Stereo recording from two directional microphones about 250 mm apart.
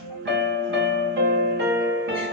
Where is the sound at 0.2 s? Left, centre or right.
Right.